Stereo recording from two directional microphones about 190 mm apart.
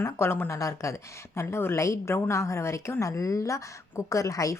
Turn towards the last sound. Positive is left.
turn(degrees=15)  # may be behind; listen again after turning